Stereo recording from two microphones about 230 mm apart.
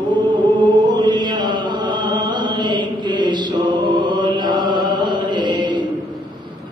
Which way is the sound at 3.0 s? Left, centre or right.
Centre.